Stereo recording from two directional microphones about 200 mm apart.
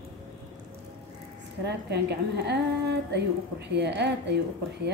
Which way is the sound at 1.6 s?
55° right (ahead or behind).